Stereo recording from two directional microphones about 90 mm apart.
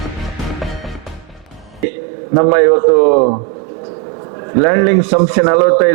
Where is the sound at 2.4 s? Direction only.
15° right (ahead or behind).